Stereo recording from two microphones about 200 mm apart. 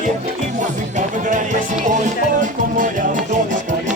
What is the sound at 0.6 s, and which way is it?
Music, 40° right (ahead or behind).